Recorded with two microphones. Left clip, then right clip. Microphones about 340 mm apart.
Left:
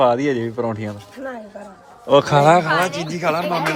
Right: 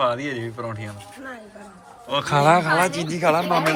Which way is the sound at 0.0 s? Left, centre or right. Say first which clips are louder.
Left 7 dB; centre.